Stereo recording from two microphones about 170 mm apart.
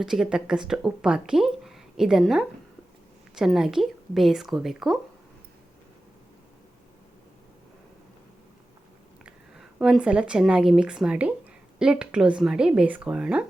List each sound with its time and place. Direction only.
0.0 s speech: 5° right (ahead or behind)
9.2 s speech: 5° right (ahead or behind)